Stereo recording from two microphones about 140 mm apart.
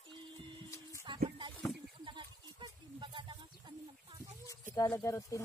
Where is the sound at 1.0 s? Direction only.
35° right (ahead or behind).